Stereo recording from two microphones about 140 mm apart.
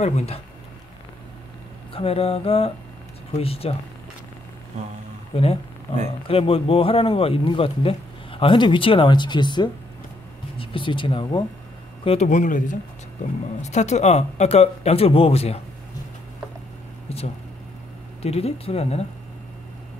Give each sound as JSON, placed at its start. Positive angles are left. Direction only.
{"t": 0.0, "sound": "speech", "side_deg": 50}
{"t": 2.0, "sound": "speech", "side_deg": 45}
{"t": 5.3, "sound": "speech", "side_deg": 45}
{"t": 12.3, "sound": "speech", "side_deg": 65}
{"t": 13.6, "sound": "speech", "side_deg": 55}
{"t": 17.1, "sound": "a sound", "side_deg": 45}
{"t": 18.2, "sound": "speech", "side_deg": 45}